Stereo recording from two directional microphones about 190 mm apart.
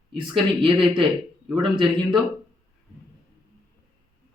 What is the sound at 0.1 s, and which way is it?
Speech, 25° right (ahead or behind).